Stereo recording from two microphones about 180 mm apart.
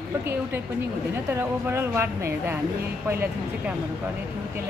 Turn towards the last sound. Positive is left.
turn(degrees=-10)  # may be behind; listen again after turning